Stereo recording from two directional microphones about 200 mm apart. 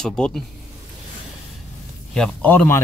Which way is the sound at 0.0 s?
5° left (ahead or behind).